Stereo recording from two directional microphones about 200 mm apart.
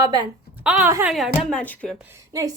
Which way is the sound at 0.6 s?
10° right (ahead or behind).